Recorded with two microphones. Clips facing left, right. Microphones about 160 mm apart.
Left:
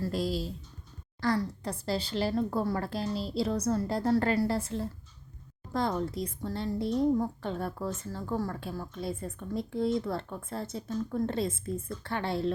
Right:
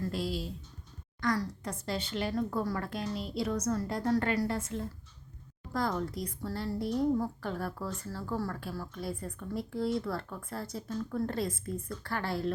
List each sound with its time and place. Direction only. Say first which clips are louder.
0.0 s a woman's voice: left 3 dB; 40° left (ahead or behind); by 12.5 s 25° left (ahead or behind)